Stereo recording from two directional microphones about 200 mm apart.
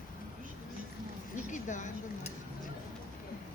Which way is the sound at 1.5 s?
40° left (ahead or behind).